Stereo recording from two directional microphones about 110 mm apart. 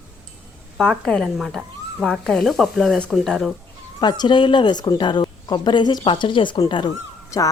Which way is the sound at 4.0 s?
40° left (ahead or behind).